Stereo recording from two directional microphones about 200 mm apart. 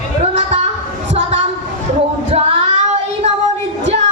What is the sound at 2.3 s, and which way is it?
Child singing, 35° right (ahead or behind).